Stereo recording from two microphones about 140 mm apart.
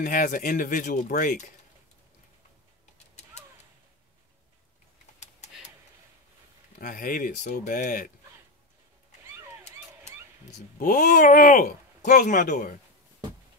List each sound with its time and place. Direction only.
0.0 s speech: 75° left (ahead or behind)
5.2 s a sound: 55° left (ahead or behind)
6.8 s speech: 85° left
10.8 s speech: 75° left (ahead or behind)